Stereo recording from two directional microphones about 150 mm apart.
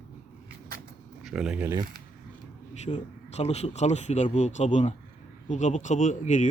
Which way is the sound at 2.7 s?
50° left (ahead or behind).